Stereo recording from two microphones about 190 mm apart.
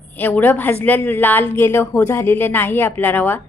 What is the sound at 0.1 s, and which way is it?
A woman's voice, 10° left (ahead or behind).